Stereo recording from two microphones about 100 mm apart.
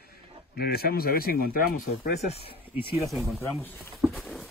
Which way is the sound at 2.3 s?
70° left (ahead or behind).